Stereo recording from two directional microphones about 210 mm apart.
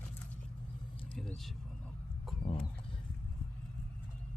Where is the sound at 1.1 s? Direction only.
5° left (ahead or behind).